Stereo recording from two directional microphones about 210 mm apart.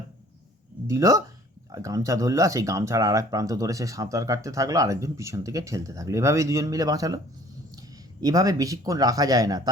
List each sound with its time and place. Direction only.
0.9 s speech: 15° right (ahead or behind)